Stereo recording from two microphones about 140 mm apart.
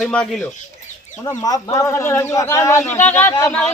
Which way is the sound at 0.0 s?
5° left (ahead or behind).